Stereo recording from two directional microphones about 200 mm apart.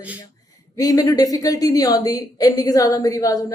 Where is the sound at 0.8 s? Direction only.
20° left (ahead or behind).